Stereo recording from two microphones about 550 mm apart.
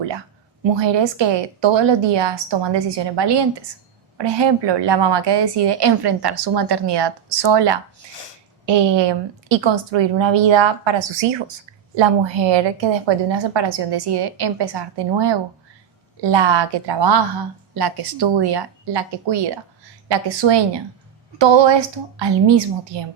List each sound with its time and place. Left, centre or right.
0.8 s a woman's voice: right